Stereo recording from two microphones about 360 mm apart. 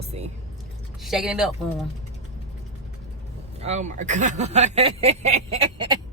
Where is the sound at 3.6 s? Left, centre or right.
Centre.